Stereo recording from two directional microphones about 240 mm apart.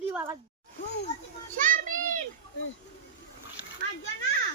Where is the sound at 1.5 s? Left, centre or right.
Right.